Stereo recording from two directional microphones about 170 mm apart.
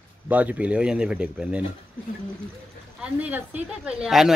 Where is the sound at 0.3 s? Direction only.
10° right (ahead or behind).